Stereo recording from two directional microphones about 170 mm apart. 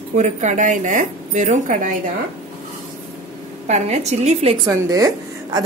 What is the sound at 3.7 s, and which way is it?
Speech, 40° right (ahead or behind).